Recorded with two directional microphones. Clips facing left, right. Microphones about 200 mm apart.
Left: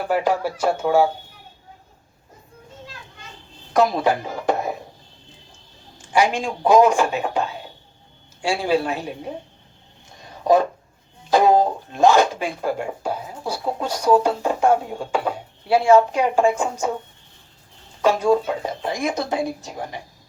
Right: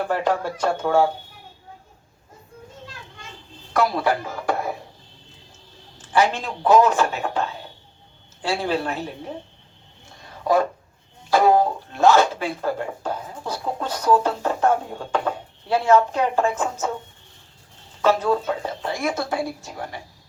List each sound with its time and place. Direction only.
0.1 s speech: 10° left (ahead or behind)
3.7 s speech: 20° left (ahead or behind)
6.1 s speech: 15° left (ahead or behind)
10.5 s speech: 20° left (ahead or behind)
18.0 s speech: 15° left (ahead or behind)